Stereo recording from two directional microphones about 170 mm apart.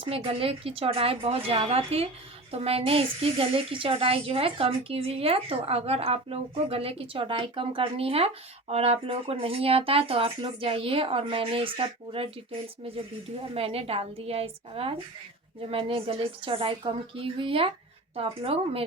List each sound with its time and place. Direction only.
0.0 s speech: 35° right (ahead or behind)
13.5 s speech: 35° right (ahead or behind)